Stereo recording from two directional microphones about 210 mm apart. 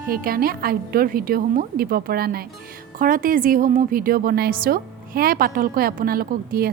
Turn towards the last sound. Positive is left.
turn(degrees=-45)  # may be behind; listen again after turning